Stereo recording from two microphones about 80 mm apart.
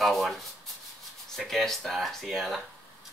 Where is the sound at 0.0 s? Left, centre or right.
Centre.